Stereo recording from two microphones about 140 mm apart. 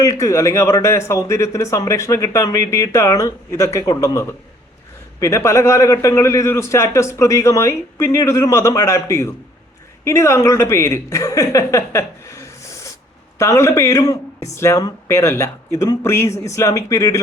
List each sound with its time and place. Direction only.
0.0 s a woman's voice: 20° left (ahead or behind)